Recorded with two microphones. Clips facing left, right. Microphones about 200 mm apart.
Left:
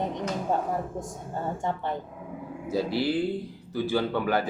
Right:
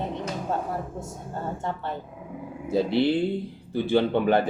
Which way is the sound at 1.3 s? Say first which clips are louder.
Left 1 dB; 15° left (ahead or behind).